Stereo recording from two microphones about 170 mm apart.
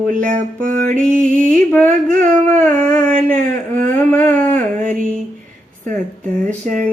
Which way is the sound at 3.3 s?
50° right (ahead or behind).